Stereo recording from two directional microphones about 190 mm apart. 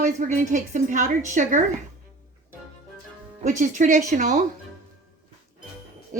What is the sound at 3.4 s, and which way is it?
Speech, 40° right (ahead or behind).